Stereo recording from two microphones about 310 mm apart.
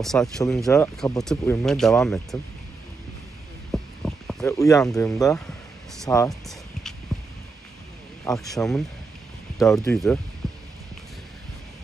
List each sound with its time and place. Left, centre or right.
0.0 s speech: centre
3.7 s a sound: centre
6.0 s speech: centre
7.1 s a sound: centre
8.3 s speech: centre
10.4 s heart sounds: centre